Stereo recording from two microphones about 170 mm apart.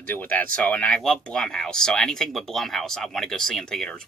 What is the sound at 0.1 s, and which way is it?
Speech, 10° left (ahead or behind).